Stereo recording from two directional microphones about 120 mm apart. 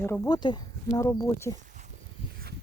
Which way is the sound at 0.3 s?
35° left (ahead or behind).